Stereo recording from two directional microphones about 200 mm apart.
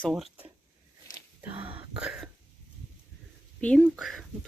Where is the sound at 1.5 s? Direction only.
25° right (ahead or behind).